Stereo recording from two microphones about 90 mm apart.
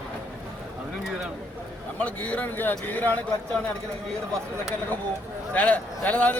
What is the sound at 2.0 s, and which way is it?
Speech, 15° left (ahead or behind).